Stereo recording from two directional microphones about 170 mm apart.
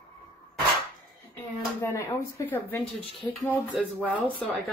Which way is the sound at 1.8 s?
15° left (ahead or behind).